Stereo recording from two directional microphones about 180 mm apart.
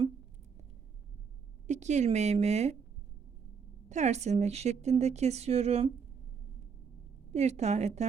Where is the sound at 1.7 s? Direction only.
40° right (ahead or behind).